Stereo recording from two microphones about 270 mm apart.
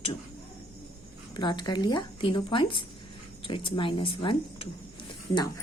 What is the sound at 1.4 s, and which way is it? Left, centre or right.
Speech, centre.